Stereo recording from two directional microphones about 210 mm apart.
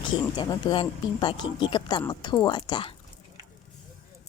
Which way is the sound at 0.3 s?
20° left (ahead or behind).